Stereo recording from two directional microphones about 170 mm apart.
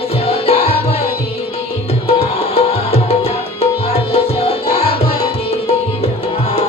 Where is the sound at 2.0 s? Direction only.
35° left (ahead or behind).